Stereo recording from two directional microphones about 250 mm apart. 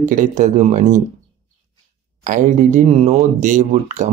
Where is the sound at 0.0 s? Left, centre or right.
Right.